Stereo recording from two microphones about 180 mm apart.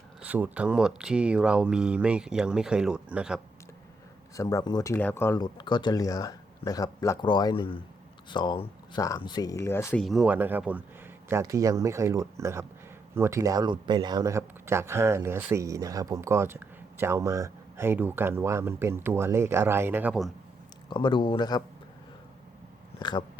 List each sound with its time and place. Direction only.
0.2 s speech: 10° right (ahead or behind)
4.4 s speech: 20° left (ahead or behind)
10.0 s speech: centre (ahead or behind)
20.9 s speech: 25° left (ahead or behind)
23.0 s speech: 25° left (ahead or behind)